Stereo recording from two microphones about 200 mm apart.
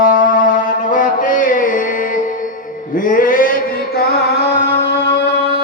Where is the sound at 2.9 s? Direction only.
45° left (ahead or behind).